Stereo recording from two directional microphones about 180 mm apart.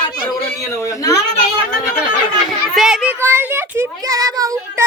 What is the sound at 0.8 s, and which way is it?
Speech, 15° left (ahead or behind).